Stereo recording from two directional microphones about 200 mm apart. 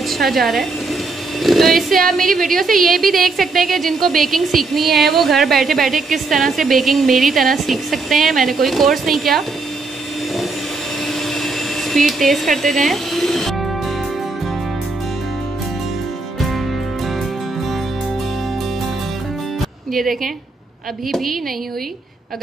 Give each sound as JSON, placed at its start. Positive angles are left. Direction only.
{"t": 0.1, "sound": "a woman's voice", "side_deg": 0}
{"t": 11.3, "sound": "speech", "side_deg": 0}
{"t": 16.3, "sound": "music", "side_deg": 0}
{"t": 19.9, "sound": "speech", "side_deg": 0}